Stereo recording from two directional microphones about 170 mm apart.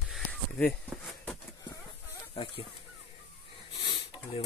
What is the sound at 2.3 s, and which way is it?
Speech, 30° left (ahead or behind).